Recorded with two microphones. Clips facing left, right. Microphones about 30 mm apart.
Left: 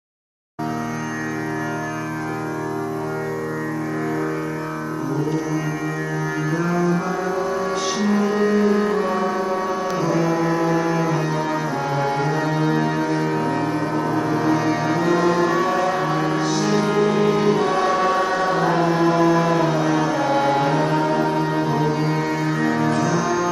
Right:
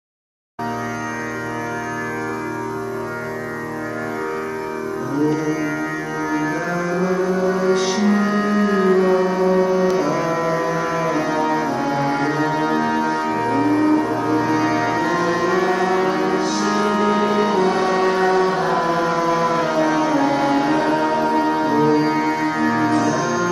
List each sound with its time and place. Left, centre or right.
7.4 s music: right
8.9 s music: centre
9.9 s music: right
11.4 s music: centre
14.3 s music: right
14.6 s music: right
15.7 s music: centre
17.5 s music: centre
18.9 s a sound: centre
19.2 s music: centre
19.7 s music: right
20.9 s music: centre